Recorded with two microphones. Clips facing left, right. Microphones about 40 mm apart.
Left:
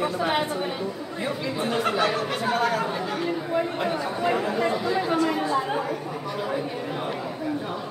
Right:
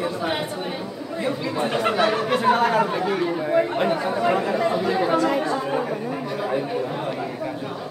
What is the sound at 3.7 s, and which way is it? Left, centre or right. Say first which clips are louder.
Speech: right 5 dB; right.